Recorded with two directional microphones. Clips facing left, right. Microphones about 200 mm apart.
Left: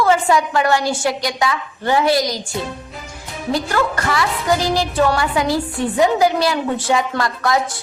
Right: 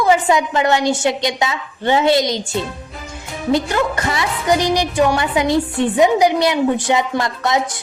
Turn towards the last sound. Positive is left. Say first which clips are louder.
# even
turn(degrees=-20)  # may be behind; listen again after turning